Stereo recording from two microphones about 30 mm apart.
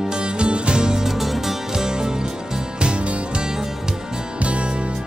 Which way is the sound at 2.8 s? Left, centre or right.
Right.